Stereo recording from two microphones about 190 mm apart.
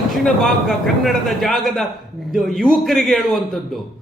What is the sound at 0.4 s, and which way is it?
A man's voice, centre (ahead or behind).